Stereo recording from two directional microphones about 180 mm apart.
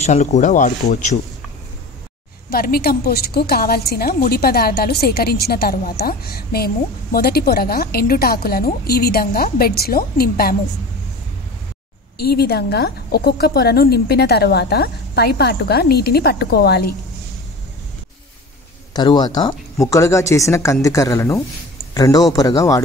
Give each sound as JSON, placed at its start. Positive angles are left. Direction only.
{"t": 0.0, "sound": "speech", "side_deg": 40}
{"t": 2.5, "sound": "a woman's voice", "side_deg": 55}
{"t": 12.4, "sound": "a woman's voice", "side_deg": 60}
{"t": 18.9, "sound": "speech", "side_deg": 25}